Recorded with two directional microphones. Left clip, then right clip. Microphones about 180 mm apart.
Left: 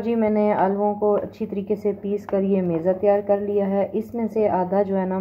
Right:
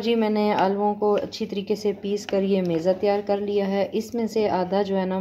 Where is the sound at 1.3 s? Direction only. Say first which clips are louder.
Left 1 dB; 10° right (ahead or behind).